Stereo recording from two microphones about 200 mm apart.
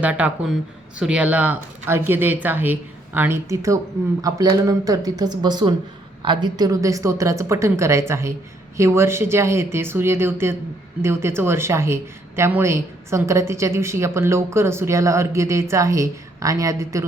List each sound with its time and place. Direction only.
0.0 s a woman's voice: 5° right (ahead or behind)